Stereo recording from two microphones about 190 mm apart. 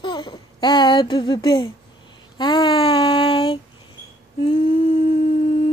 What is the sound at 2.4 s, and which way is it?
Child singing, 20° left (ahead or behind).